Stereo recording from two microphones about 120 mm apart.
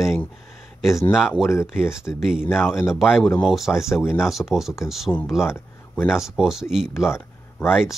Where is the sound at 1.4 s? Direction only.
5° right (ahead or behind).